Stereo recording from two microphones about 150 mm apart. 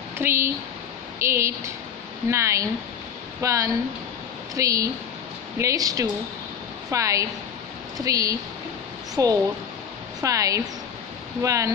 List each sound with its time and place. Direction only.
0.2 s a woman's voice: 15° right (ahead or behind)